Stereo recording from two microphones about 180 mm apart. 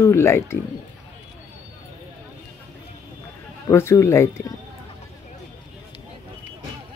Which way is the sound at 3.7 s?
15° left (ahead or behind).